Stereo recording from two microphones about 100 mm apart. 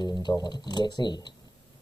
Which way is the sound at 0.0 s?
45° left (ahead or behind).